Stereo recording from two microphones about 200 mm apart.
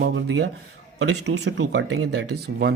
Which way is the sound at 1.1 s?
75° right (ahead or behind).